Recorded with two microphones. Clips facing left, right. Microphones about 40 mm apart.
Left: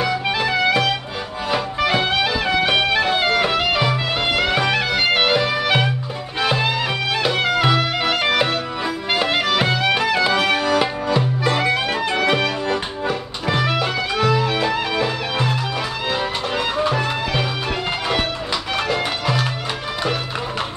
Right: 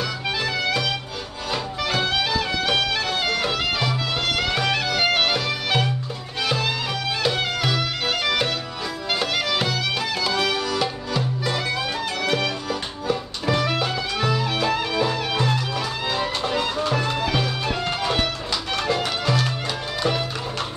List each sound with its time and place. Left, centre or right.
0.0 s music: centre
18.9 s music: centre